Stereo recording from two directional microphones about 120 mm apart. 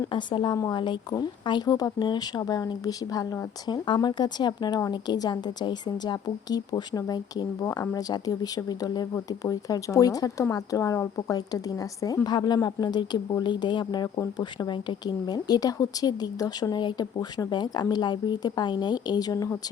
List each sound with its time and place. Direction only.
0.1 s speech: 40° left (ahead or behind)